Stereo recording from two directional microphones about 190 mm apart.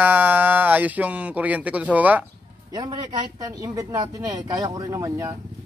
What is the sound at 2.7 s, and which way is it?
Speech, 20° right (ahead or behind).